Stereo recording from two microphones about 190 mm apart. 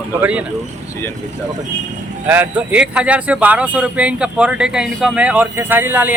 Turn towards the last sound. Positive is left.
turn(degrees=-10)  # may be behind; listen again after turning